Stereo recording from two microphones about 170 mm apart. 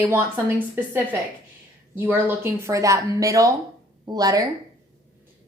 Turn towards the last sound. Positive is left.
turn(degrees=-20)  # may be behind; listen again after turning